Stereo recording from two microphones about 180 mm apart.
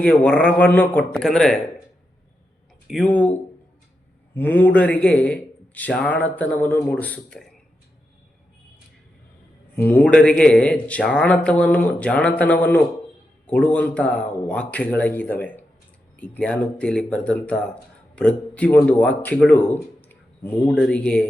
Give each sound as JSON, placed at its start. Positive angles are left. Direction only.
{"t": 0.0, "sound": "a man's voice", "side_deg": 5}
{"t": 2.8, "sound": "speech", "side_deg": 0}
{"t": 3.1, "sound": "a man's voice", "side_deg": 10}
{"t": 4.4, "sound": "a man's voice", "side_deg": 10}
{"t": 9.7, "sound": "a man's voice", "side_deg": 10}